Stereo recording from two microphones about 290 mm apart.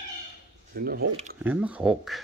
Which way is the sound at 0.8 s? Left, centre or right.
Right.